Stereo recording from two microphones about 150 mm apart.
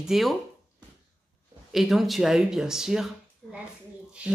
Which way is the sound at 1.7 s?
Centre (ahead or behind).